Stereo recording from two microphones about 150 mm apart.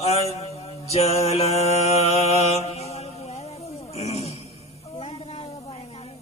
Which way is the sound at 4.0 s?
45° left (ahead or behind).